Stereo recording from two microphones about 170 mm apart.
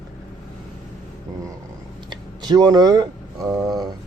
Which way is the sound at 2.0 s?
25° right (ahead or behind).